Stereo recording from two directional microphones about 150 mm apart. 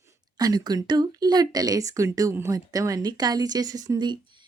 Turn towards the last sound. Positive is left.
turn(degrees=-30)  # may be behind; listen again after turning